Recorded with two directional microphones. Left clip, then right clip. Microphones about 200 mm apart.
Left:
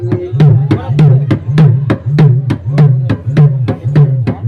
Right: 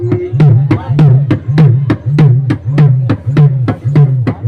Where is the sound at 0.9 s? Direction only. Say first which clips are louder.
Even; 10° left (ahead or behind).